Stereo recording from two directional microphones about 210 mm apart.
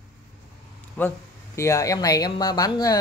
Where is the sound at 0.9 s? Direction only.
10° left (ahead or behind).